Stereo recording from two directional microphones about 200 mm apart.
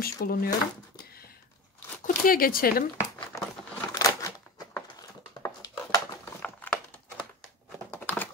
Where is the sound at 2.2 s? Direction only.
45° left (ahead or behind).